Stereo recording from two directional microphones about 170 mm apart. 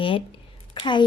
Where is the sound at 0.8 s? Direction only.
30° left (ahead or behind).